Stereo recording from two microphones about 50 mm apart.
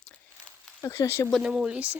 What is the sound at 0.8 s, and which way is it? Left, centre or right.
Speech, left.